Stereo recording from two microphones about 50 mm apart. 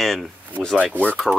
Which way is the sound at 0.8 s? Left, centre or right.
Left.